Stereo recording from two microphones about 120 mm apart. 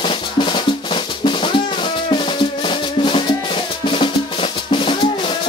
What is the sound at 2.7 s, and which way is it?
Music, 45° left (ahead or behind).